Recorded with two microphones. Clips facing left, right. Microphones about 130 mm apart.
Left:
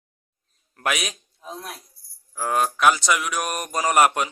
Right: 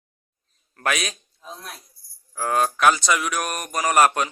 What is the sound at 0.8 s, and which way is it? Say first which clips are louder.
A man's voice: right 1 dB; 15° left (ahead or behind).